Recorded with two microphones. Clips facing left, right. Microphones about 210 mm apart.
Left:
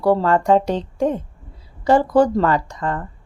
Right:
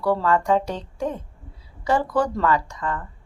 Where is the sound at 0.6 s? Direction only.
90° left.